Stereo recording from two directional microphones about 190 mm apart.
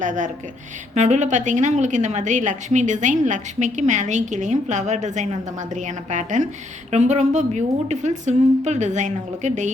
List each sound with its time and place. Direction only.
0.0 s a woman's voice: 40° right (ahead or behind)